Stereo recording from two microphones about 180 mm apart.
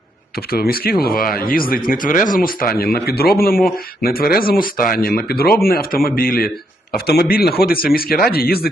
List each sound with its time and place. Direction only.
0.3 s speech: 60° left (ahead or behind)